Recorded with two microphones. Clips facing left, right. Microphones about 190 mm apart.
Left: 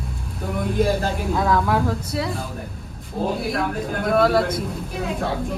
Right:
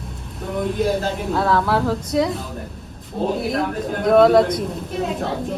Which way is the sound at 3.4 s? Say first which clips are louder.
Right 2 dB; centre (ahead or behind).